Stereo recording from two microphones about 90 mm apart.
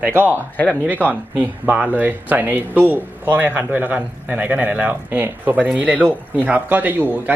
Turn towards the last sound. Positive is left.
turn(degrees=-20)  # may be behind; listen again after turning